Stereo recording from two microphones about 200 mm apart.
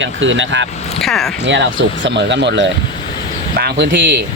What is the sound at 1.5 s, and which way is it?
Speech, 65° right (ahead or behind).